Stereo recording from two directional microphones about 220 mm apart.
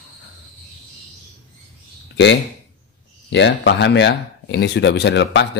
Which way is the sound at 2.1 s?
55° left (ahead or behind).